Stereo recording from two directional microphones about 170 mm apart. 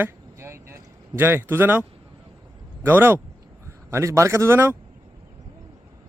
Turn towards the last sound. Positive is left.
turn(degrees=-15)  # may be behind; listen again after turning